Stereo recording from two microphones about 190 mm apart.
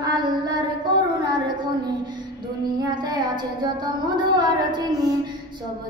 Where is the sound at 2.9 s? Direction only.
20° right (ahead or behind).